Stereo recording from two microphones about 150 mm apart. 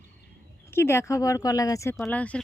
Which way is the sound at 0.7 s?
15° left (ahead or behind).